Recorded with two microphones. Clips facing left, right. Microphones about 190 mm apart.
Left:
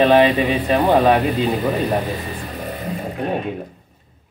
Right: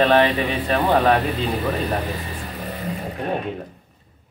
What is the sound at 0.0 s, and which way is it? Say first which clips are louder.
Speech: left 4 dB; 15° left (ahead or behind).